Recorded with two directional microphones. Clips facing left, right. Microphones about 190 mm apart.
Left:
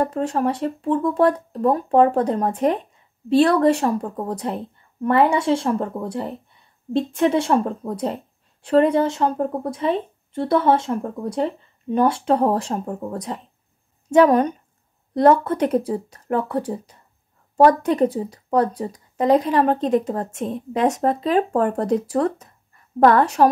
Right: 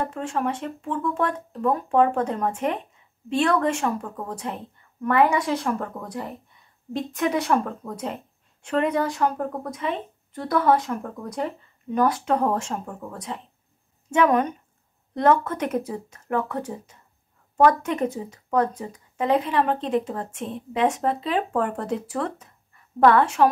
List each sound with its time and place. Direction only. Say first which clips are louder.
0.0 s speech: left 5 dB; 40° left (ahead or behind)